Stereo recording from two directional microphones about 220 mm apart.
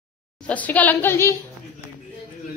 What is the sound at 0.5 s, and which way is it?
Speech, 5° left (ahead or behind).